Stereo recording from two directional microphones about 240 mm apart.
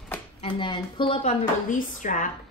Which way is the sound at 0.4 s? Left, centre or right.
Left.